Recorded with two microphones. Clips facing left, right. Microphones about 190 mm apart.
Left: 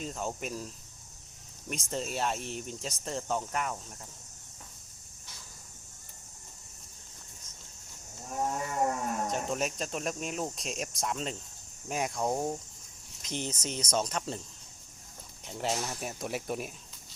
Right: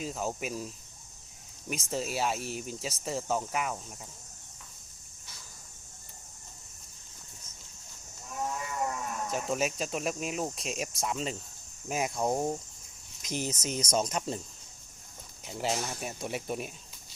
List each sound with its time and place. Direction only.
0.0 s speech: 5° right (ahead or behind)
1.7 s speech: 5° right (ahead or behind)
8.3 s livestock: 45° left (ahead or behind)
9.3 s speech: 5° right (ahead or behind)
15.4 s speech: 5° right (ahead or behind)